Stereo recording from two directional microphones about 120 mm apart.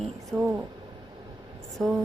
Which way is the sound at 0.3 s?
20° right (ahead or behind).